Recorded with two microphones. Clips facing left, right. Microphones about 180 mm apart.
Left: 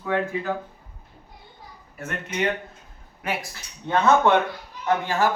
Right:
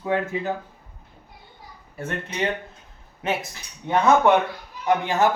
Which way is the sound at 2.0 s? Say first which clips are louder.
Even; 30° right (ahead or behind).